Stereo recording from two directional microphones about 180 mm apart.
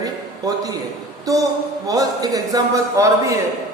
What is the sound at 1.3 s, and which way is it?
A man's voice, 20° right (ahead or behind).